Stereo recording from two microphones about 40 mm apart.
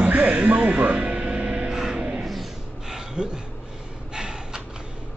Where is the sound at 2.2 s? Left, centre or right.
Centre.